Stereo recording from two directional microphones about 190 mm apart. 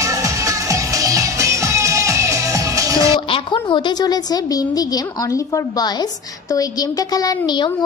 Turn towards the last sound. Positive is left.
turn(degrees=20)  # may be behind; listen again after turning